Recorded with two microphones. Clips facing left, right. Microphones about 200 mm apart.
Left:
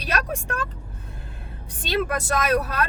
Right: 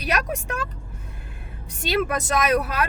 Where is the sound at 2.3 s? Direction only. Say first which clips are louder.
Right 1 dB; 15° right (ahead or behind).